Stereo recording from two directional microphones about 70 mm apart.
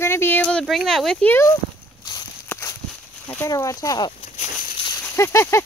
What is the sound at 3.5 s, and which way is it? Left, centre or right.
Speech, left.